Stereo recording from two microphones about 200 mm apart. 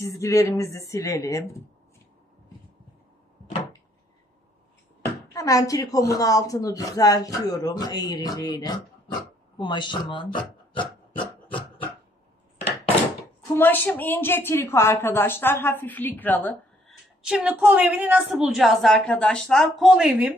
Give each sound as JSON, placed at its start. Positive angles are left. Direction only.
{"t": 0.0, "sound": "a woman's voice", "side_deg": 15}
{"t": 5.3, "sound": "a woman's voice", "side_deg": 15}
{"t": 13.6, "sound": "a woman's voice", "side_deg": 10}
{"t": 17.2, "sound": "a woman's voice", "side_deg": -5}